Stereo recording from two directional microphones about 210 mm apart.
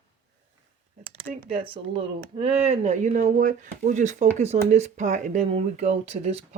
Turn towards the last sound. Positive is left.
turn(degrees=-30)  # may be behind; listen again after turning